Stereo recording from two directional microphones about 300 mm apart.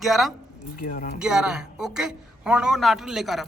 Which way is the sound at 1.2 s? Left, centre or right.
Centre.